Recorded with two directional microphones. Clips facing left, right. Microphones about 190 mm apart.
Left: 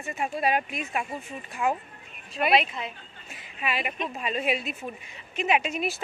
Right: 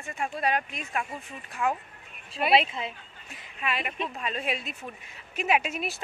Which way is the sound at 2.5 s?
25° right (ahead or behind).